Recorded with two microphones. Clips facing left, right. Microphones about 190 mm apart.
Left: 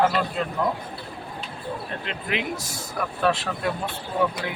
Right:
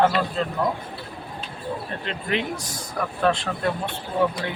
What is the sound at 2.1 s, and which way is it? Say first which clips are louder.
Speech: right 3 dB; 5° left (ahead or behind).